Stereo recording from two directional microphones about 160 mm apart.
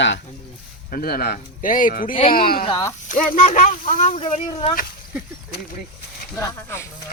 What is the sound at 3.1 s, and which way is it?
Speech, 60° left (ahead or behind).